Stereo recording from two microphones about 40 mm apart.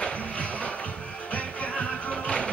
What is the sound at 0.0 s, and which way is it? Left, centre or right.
Music, left.